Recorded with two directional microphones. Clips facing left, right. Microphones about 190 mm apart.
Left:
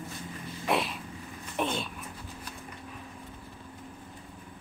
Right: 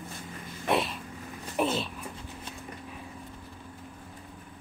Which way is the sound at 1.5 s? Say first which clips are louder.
Right 3 dB; 5° right (ahead or behind).